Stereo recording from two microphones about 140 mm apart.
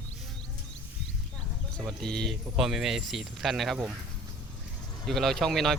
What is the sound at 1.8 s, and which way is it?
Speech, 5° left (ahead or behind).